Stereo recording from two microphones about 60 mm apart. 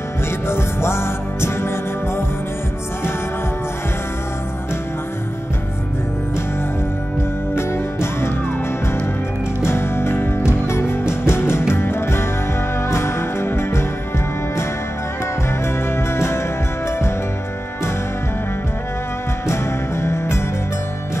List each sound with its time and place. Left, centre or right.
0.5 s music: left
7.5 s music: left
9.6 s music: left
19.4 s music: left